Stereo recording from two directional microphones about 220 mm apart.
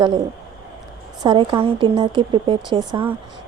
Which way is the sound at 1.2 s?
20° right (ahead or behind).